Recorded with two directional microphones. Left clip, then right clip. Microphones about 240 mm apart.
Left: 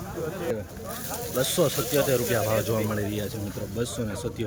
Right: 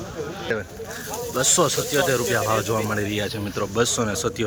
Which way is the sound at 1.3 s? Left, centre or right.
Centre.